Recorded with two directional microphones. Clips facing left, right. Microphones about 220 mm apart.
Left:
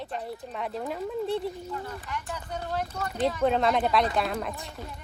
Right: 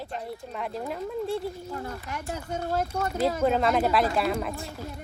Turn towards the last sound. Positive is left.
turn(degrees=0)  # may be behind; listen again after turning